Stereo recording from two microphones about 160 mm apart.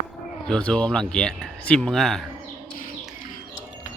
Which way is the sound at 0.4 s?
5° left (ahead or behind).